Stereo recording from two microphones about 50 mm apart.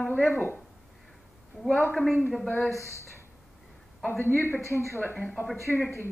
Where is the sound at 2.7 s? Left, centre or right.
Left.